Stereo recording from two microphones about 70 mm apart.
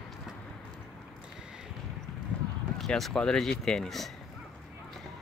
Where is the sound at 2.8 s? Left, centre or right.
Centre.